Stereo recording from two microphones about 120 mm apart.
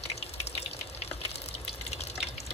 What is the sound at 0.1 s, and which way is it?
Water, 60° left (ahead or behind).